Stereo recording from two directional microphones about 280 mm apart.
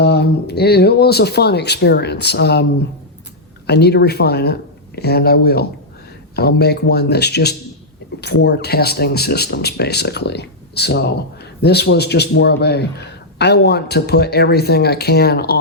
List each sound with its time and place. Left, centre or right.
0.0 s a man's voice: left
3.7 s a man's voice: left